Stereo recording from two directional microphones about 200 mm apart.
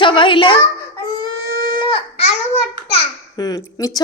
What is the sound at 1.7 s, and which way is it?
Babbling, 25° left (ahead or behind).